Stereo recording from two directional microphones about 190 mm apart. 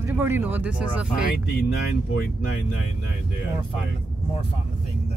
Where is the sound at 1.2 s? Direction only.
55° left (ahead or behind).